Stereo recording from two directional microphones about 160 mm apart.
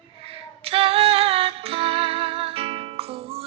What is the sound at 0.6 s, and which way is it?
Music, 35° right (ahead or behind).